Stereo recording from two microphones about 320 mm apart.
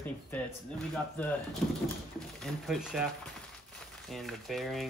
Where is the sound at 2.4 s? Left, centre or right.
Centre.